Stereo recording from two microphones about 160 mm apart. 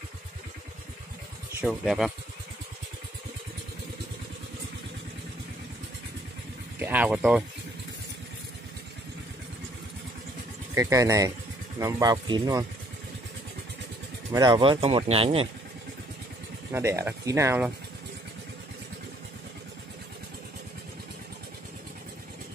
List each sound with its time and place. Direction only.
1.6 s speech: centre (ahead or behind)
6.8 s speech: 10° right (ahead or behind)
10.7 s speech: 20° right (ahead or behind)
14.3 s speech: 30° right (ahead or behind)
16.7 s speech: 15° right (ahead or behind)